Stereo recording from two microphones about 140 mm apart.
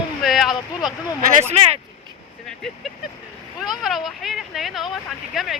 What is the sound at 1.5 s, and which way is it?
Speech, 45° right (ahead or behind).